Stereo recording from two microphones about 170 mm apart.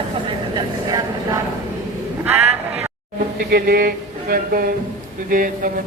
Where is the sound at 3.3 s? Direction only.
65° right (ahead or behind).